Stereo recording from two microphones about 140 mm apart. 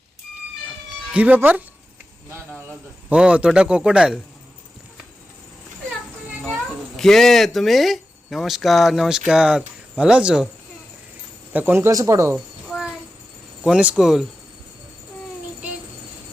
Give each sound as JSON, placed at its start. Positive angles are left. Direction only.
{"t": 1.1, "sound": "a man's voice", "side_deg": -10}
{"t": 3.1, "sound": "a man's voice", "side_deg": -10}
{"t": 6.5, "sound": "speech", "side_deg": 5}
{"t": 11.5, "sound": "speech", "side_deg": -15}
{"t": 12.6, "sound": "a sound", "side_deg": -5}
{"t": 13.7, "sound": "speech", "side_deg": -5}